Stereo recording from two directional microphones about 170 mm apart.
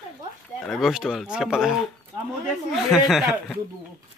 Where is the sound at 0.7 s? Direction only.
Centre (ahead or behind).